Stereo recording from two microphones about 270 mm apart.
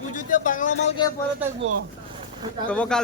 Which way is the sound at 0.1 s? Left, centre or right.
Left.